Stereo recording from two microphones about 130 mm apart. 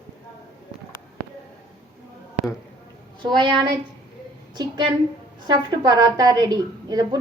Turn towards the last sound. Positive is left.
turn(degrees=-30)  # may be behind; listen again after turning